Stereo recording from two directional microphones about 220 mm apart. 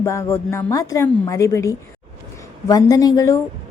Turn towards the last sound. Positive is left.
turn(degrees=15)  # may be behind; listen again after turning